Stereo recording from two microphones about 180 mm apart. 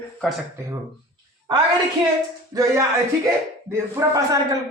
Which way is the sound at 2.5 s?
20° right (ahead or behind).